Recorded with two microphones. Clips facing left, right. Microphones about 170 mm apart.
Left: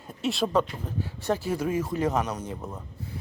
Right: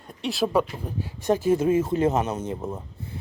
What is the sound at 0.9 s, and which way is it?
Speech, 15° right (ahead or behind).